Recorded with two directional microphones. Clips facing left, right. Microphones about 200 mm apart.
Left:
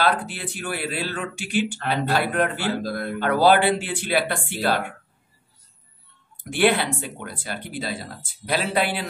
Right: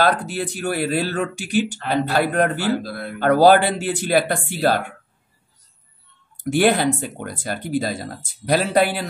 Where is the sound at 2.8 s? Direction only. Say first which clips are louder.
Left 2 dB; 45° left (ahead or behind).